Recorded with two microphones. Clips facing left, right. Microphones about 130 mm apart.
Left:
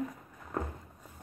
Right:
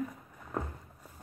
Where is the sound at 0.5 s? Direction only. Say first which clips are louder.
Left 1 dB; 5° right (ahead or behind).